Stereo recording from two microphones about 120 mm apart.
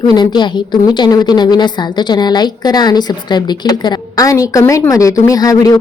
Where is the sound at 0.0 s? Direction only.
35° left (ahead or behind).